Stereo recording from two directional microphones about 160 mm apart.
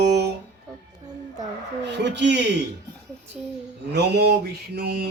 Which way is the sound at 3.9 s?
90° right.